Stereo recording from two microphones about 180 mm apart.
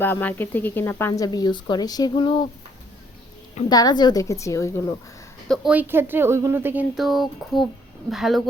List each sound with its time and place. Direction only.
0.0 s speech: 10° left (ahead or behind); by 2.5 s 25° left (ahead or behind)
3.7 s speech: 20° left (ahead or behind)
5.5 s speech: 5° right (ahead or behind)